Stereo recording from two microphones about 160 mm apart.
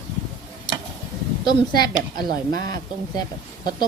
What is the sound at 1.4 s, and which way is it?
A woman's voice, 25° left (ahead or behind).